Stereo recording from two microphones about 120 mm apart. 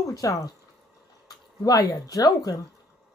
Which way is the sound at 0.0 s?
30° left (ahead or behind).